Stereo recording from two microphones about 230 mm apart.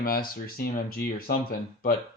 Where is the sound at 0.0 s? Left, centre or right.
Left.